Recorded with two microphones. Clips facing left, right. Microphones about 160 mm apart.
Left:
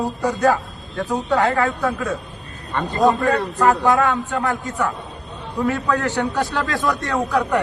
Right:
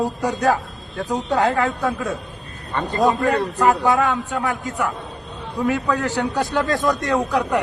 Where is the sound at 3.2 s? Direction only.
15° right (ahead or behind).